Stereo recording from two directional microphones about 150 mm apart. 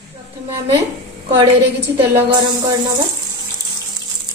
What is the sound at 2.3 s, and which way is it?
Music, 30° right (ahead or behind).